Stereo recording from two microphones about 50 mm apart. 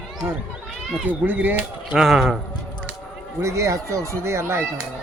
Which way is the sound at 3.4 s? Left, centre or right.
Right.